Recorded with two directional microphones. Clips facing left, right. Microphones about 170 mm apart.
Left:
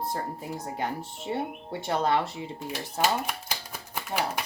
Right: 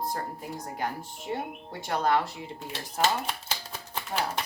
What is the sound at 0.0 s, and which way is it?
Speech, 25° left (ahead or behind).